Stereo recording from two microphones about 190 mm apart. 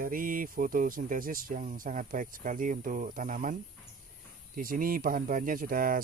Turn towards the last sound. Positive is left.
turn(degrees=-50)  # may be behind; listen again after turning